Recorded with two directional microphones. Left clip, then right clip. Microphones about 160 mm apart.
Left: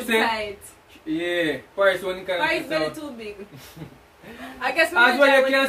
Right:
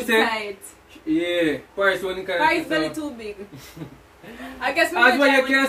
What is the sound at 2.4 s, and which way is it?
Speech, 10° right (ahead or behind).